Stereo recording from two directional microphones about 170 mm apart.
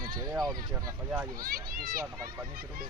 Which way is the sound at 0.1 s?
20° right (ahead or behind).